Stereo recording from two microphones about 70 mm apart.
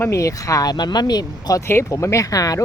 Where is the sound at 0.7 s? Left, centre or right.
Left.